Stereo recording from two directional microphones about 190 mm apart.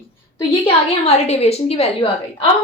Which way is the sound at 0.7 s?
35° left (ahead or behind).